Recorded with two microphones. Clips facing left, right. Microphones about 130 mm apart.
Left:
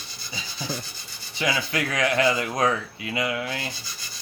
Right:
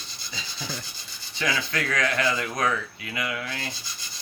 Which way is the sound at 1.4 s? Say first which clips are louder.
Left 2 dB; 20° left (ahead or behind).